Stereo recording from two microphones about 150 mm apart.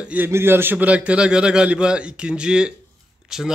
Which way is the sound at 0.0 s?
10° right (ahead or behind).